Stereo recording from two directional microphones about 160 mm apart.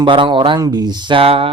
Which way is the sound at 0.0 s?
30° right (ahead or behind).